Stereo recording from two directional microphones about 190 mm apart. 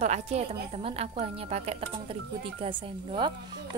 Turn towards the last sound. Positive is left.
turn(degrees=-25)  # may be behind; listen again after turning